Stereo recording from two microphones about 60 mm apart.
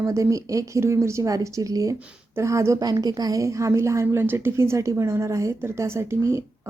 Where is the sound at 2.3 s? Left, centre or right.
Right.